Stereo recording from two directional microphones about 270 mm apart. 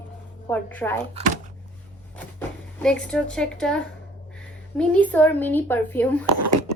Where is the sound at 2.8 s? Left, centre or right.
Centre.